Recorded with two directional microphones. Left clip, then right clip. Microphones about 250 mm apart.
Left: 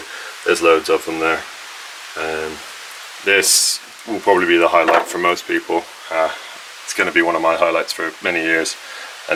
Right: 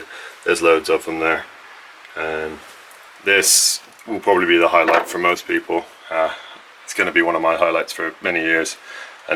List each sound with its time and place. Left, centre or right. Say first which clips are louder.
0.4 s speech: left 1 dB; centre
3.2 s speech: left 1 dB; centre